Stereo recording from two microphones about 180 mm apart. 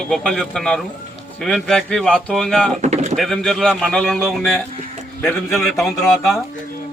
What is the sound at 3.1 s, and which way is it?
Speech, centre (ahead or behind).